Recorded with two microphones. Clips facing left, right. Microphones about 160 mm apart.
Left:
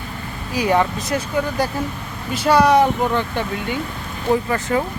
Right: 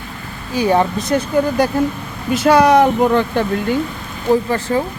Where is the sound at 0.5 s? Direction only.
30° right (ahead or behind).